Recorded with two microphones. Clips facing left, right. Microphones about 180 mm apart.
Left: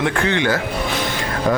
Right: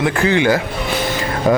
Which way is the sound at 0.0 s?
5° right (ahead or behind).